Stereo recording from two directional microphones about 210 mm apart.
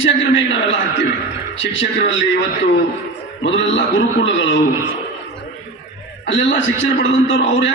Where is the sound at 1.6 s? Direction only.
60° left (ahead or behind).